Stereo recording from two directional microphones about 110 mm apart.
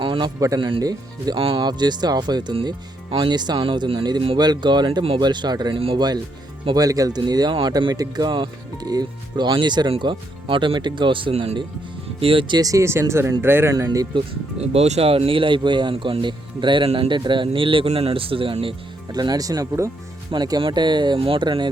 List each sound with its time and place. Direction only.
0.0 s a sound: 50° right (ahead or behind)
0.3 s speech: 30° right (ahead or behind)
1.4 s speech: 55° right (ahead or behind)
1.6 s speech: 40° right (ahead or behind)
12.5 s speech: 30° right (ahead or behind)
13.7 s speech: 35° right (ahead or behind)
14.6 s speech: 70° right (ahead or behind); by 18.7 s 55° right (ahead or behind)
19.1 s speech: 40° right (ahead or behind)